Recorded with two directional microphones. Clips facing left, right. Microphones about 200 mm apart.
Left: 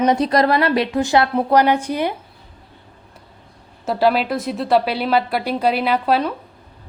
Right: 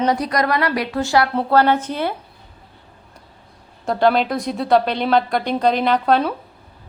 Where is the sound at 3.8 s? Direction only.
5° left (ahead or behind).